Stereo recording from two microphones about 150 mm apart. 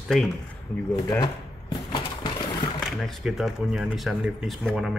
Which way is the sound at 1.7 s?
25° left (ahead or behind).